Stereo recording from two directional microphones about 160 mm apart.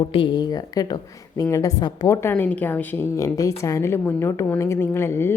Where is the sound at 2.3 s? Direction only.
10° left (ahead or behind).